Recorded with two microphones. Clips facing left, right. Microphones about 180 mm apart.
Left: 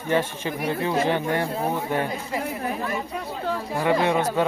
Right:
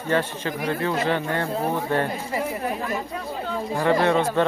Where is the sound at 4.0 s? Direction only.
15° left (ahead or behind).